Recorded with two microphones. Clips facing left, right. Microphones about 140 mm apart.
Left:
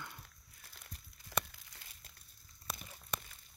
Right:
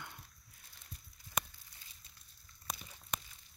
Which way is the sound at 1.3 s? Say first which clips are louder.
Left 2 dB; 90° left.